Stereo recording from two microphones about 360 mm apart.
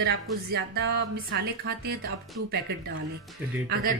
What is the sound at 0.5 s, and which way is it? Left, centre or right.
A woman's voice, right.